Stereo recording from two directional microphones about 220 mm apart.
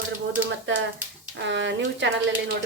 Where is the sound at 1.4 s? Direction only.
55° right (ahead or behind).